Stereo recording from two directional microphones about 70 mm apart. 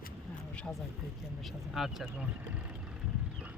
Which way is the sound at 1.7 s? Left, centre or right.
Centre.